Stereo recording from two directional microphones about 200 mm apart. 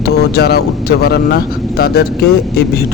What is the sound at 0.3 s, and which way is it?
Speech, 55° left (ahead or behind).